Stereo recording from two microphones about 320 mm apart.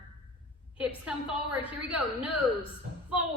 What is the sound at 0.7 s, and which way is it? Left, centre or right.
A woman's voice, centre.